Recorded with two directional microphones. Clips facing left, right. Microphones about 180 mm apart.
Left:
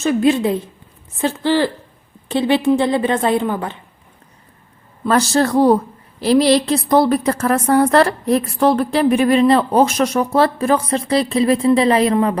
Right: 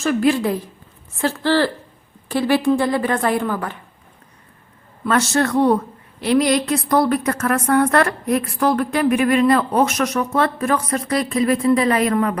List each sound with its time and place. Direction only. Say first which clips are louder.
0.0 s a woman's voice: left 2 dB; 20° left (ahead or behind)
5.0 s a woman's voice: left 3 dB; 35° left (ahead or behind)